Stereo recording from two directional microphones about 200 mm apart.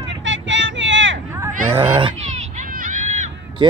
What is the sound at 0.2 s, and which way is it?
Vehicle, 65° right (ahead or behind).